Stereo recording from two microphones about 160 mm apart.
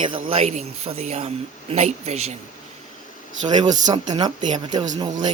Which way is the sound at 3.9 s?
25° right (ahead or behind).